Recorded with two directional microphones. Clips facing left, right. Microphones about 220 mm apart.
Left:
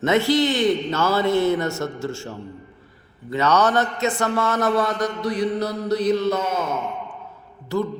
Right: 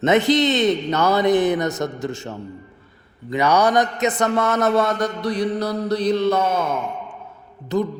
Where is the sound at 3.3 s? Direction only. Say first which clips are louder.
Right 2 dB; 10° right (ahead or behind).